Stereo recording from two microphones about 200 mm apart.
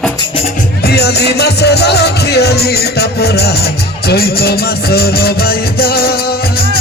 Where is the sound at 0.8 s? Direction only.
55° left (ahead or behind).